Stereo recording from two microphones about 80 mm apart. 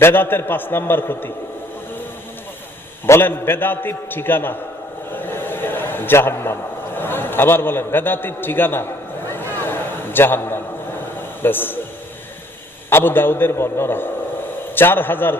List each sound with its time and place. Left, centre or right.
0.0 s a man's voice: left
3.1 s a man's voice: left
5.1 s a sound: left
11.4 s a man's voice: left
12.9 s a man's voice: left